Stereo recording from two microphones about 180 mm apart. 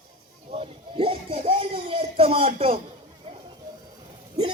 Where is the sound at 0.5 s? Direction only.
30° right (ahead or behind).